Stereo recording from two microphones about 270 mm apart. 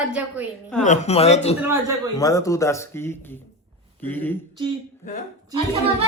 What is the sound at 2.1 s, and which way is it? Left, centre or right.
Speech, centre.